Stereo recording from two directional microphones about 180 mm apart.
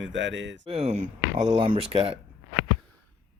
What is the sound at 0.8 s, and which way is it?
Speech, 40° right (ahead or behind).